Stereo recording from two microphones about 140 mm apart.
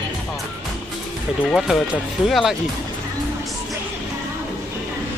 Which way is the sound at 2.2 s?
Centre (ahead or behind).